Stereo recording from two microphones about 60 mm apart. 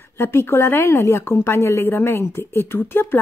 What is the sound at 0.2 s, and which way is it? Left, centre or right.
A woman's voice, left.